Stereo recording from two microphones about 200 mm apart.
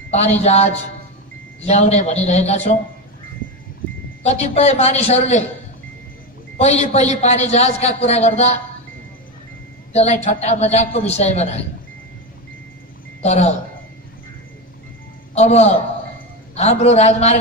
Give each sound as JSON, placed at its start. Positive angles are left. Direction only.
{"t": 0.1, "sound": "a man's voice", "side_deg": 35}
{"t": 4.2, "sound": "a man's voice", "side_deg": 35}
{"t": 6.6, "sound": "a man's voice", "side_deg": 35}
{"t": 9.9, "sound": "a man's voice", "side_deg": 35}
{"t": 13.2, "sound": "a man's voice", "side_deg": 35}
{"t": 15.3, "sound": "a man's voice", "side_deg": 30}